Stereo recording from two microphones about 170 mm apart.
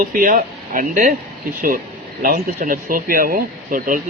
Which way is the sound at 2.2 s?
55° right (ahead or behind).